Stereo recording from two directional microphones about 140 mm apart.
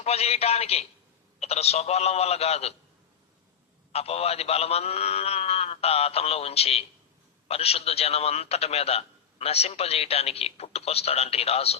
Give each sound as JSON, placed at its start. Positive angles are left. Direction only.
{"t": 0.0, "sound": "a man's voice", "side_deg": 45}
{"t": 3.9, "sound": "a man's voice", "side_deg": 45}